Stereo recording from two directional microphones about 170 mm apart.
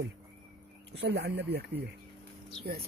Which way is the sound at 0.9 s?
75° right (ahead or behind).